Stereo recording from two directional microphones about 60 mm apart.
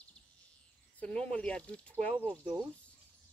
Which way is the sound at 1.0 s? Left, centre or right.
Left.